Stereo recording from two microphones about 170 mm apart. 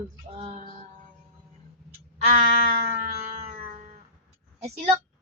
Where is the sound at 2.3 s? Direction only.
40° right (ahead or behind).